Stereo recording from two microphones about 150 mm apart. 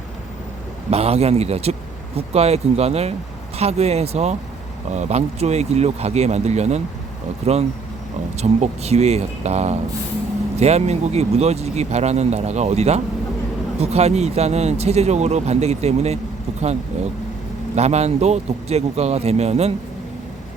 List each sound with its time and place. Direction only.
0.9 s speech: 45° right (ahead or behind)